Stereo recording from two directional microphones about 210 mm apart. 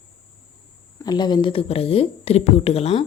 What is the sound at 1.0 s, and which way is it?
Speech, 20° left (ahead or behind).